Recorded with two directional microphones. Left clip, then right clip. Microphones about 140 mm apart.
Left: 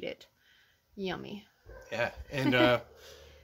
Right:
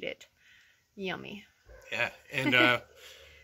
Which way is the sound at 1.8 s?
25° left (ahead or behind).